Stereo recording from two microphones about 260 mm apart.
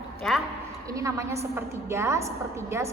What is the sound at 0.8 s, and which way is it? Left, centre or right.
A woman's voice, centre.